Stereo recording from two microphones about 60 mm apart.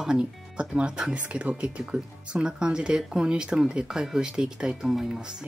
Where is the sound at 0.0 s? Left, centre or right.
Centre.